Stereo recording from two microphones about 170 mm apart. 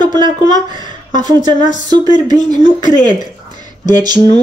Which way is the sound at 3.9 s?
25° right (ahead or behind).